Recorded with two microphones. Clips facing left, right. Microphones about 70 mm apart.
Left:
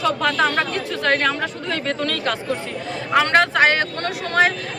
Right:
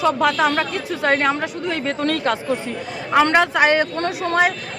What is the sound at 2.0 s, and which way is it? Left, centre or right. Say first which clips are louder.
Speech: right 3 dB; right.